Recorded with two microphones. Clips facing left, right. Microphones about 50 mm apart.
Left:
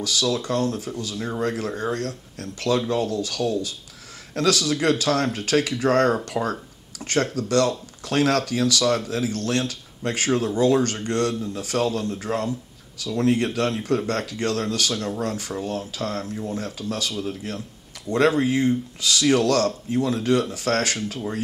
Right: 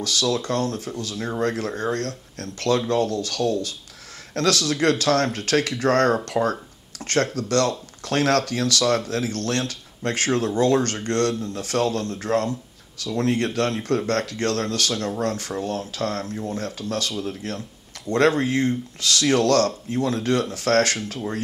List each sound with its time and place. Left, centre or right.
0.0 s speech: centre
1.1 s speech: centre
1.4 s speech: centre